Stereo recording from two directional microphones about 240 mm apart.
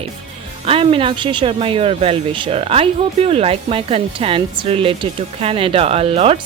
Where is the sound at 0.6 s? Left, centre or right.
Right.